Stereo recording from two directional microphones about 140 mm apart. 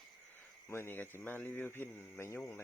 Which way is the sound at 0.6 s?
15° left (ahead or behind).